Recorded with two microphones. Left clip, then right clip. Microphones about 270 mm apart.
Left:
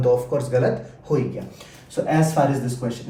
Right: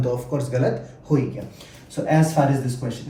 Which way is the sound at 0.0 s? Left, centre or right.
Centre.